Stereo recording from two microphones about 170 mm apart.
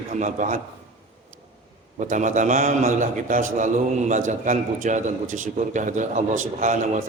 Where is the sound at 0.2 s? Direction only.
45° right (ahead or behind).